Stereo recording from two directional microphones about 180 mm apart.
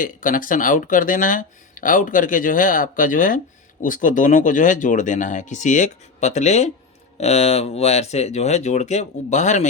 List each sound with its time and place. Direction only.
0.0 s speech: 50° left (ahead or behind)